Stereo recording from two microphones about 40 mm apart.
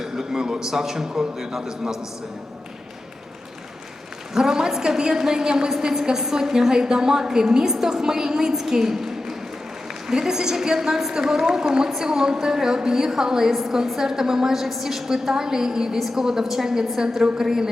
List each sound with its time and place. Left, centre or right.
0.0 s a man's voice: centre
4.4 s a woman's voice: centre